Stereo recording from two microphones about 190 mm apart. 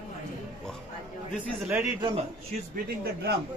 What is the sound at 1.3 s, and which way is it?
Speech, 10° right (ahead or behind).